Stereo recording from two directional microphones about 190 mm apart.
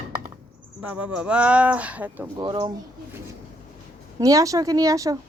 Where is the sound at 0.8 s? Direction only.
5° right (ahead or behind).